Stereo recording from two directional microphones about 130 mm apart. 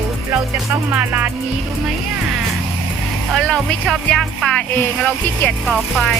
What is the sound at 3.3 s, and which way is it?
Speech, centre (ahead or behind).